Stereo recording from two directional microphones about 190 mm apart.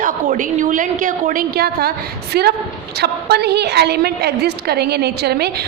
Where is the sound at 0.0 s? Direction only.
45° right (ahead or behind).